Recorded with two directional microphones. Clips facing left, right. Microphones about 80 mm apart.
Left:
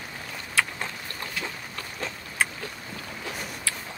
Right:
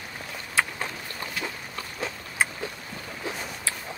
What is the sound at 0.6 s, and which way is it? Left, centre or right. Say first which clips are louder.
Boat: even; right.